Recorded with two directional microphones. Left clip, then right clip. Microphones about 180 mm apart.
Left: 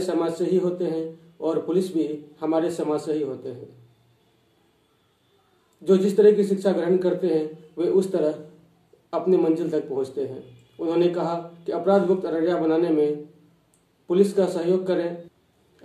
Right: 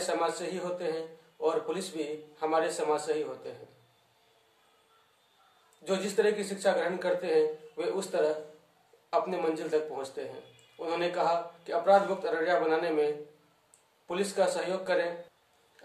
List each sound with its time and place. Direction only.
0.0 s a man's voice: 10° right (ahead or behind)
5.9 s a man's voice: 10° right (ahead or behind)